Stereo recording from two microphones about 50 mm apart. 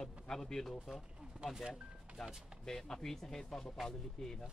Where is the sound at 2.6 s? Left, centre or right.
Centre.